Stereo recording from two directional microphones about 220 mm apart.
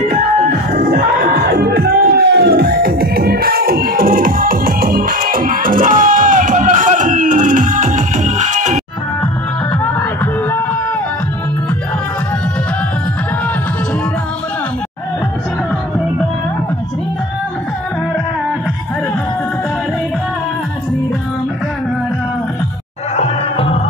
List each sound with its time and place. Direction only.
0.7 s music: 40° right (ahead or behind)
23.1 s music: 25° left (ahead or behind)